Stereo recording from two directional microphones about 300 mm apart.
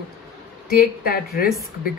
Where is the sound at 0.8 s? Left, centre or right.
Left.